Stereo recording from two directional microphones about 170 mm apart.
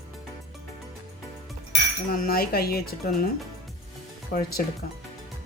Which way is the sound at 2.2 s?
65° left (ahead or behind).